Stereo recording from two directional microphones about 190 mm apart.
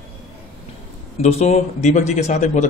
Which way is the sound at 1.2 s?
35° left (ahead or behind).